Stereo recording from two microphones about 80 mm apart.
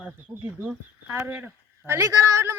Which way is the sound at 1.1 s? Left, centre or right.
Right.